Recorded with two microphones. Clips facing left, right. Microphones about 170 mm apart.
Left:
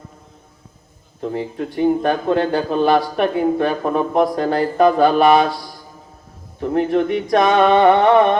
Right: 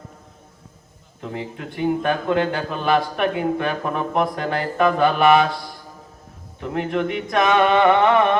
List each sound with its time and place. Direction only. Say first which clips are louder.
1.2 s speech: left 7 dB; 35° left (ahead or behind)
6.6 s speech: left 6 dB; 35° left (ahead or behind)